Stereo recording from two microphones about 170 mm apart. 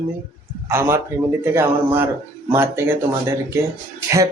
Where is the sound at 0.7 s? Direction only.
15° right (ahead or behind).